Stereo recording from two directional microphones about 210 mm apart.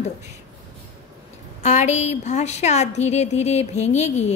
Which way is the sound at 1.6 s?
35° left (ahead or behind).